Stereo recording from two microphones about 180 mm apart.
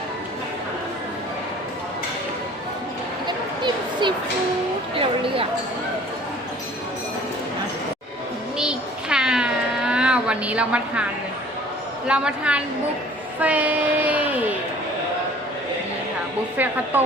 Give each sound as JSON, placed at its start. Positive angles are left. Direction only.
{"t": 3.2, "sound": "a sound", "side_deg": -25}
{"t": 8.5, "sound": "cat", "side_deg": -5}
{"t": 12.0, "sound": "speech", "side_deg": -5}
{"t": 16.9, "sound": "speech", "side_deg": -10}